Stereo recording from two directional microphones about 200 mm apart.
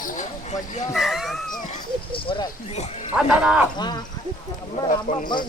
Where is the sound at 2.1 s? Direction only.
25° left (ahead or behind).